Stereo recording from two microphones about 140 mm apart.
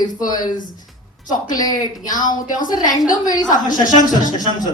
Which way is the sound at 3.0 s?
70° left (ahead or behind).